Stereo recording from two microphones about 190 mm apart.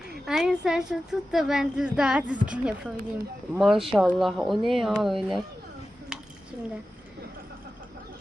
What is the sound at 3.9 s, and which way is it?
A woman's voice, centre (ahead or behind).